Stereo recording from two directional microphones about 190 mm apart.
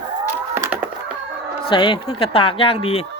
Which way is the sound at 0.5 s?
10° right (ahead or behind).